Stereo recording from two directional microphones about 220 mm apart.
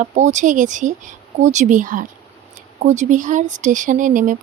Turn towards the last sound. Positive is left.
turn(degrees=-35)  # may be behind; listen again after turning